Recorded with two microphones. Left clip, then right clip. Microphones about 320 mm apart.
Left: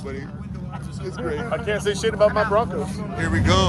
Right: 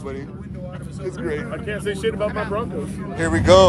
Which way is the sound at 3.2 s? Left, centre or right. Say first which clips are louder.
Right 8 dB; centre.